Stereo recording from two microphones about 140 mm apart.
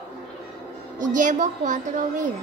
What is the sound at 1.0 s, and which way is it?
A woman's voice, 65° right (ahead or behind).